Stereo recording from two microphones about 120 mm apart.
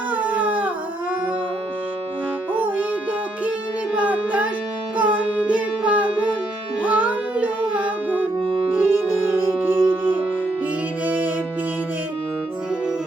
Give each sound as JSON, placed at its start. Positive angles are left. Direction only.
{"t": 0.1, "sound": "howl", "side_deg": -15}
{"t": 2.5, "sound": "music", "side_deg": -15}